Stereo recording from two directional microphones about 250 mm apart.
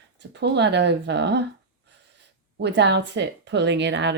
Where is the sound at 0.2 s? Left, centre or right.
Right.